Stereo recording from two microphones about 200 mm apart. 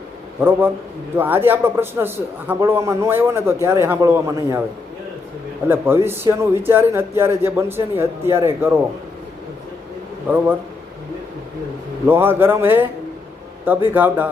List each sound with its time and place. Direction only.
1.1 s a man's voice: 10° right (ahead or behind)
5.6 s a man's voice: 10° right (ahead or behind)
10.2 s a man's voice: 10° right (ahead or behind)
12.0 s a man's voice: 10° right (ahead or behind)
13.9 s a man's voice: 10° right (ahead or behind)